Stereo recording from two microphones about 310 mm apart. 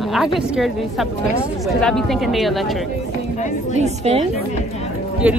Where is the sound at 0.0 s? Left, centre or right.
Centre.